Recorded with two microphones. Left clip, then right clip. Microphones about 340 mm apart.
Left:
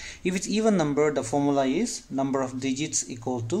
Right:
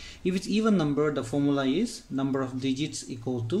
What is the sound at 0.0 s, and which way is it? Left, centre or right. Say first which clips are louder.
Speech: left 1 dB; left.